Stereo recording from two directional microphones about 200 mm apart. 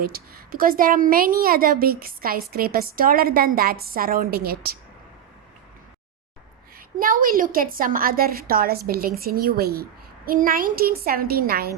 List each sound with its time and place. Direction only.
0.0 s a woman's voice: 50° right (ahead or behind)
6.7 s a woman's voice: 45° right (ahead or behind)